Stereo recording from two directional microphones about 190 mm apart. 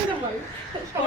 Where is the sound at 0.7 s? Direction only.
25° right (ahead or behind).